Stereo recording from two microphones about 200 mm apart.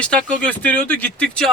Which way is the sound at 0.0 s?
5° left (ahead or behind).